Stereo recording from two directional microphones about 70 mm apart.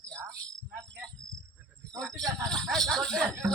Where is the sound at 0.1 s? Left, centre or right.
Right.